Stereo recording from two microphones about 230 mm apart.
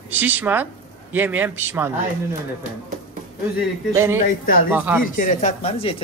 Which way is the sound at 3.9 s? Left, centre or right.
Centre.